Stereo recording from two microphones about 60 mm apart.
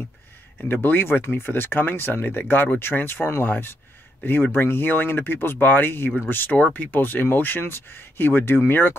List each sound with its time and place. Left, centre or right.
0.8 s speech: left